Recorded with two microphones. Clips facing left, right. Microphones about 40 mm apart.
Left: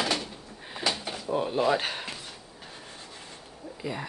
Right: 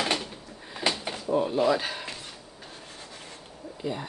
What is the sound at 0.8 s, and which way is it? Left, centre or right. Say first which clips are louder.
Drawer open or close: right 2 dB; right.